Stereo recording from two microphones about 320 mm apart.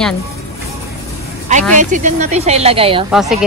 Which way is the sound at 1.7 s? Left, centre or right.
Right.